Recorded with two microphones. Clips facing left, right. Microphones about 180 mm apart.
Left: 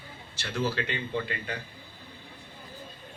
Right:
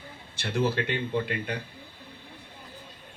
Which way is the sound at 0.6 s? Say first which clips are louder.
Right 3 dB; 55° right (ahead or behind).